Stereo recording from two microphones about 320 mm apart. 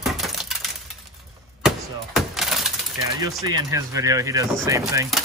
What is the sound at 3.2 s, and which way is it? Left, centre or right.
Speech, centre.